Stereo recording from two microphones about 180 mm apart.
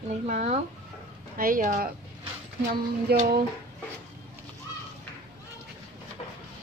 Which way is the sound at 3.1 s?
60° right (ahead or behind).